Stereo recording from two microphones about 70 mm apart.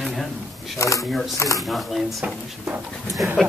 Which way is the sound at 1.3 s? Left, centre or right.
Left.